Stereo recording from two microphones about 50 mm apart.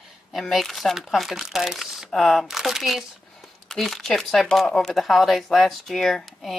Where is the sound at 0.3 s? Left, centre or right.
Centre.